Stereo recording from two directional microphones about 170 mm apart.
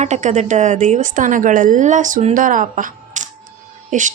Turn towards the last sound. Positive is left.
turn(degrees=-50)  # may be behind; listen again after turning